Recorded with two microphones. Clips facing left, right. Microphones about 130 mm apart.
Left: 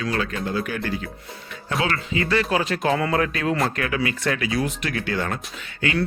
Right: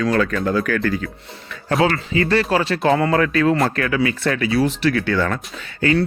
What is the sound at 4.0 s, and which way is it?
Speech, 30° right (ahead or behind).